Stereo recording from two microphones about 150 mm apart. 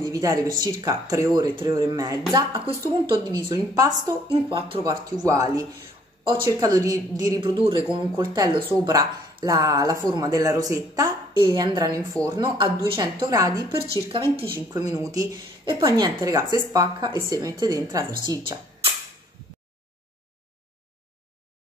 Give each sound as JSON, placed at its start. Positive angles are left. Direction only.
{"t": 0.0, "sound": "speech", "side_deg": -25}
{"t": 4.3, "sound": "speech", "side_deg": -35}